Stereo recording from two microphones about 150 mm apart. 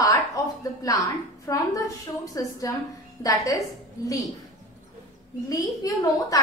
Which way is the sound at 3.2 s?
25° left (ahead or behind).